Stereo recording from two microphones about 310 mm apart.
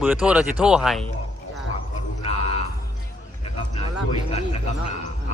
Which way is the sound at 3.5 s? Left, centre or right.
Centre.